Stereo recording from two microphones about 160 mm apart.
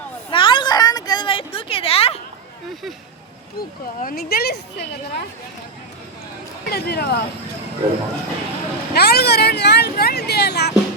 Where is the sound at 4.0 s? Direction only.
65° left (ahead or behind); by 4.8 s 85° left.